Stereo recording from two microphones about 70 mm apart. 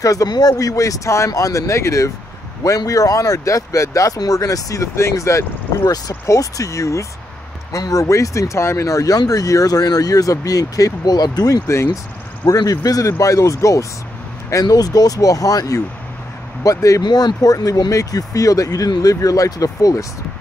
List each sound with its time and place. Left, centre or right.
0.0 s speech: left
11.6 s speech: left
12.4 s speech: left
14.5 s speech: left
17.0 s speech: left